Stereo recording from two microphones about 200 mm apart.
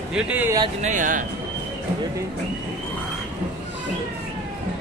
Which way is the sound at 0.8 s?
40° right (ahead or behind).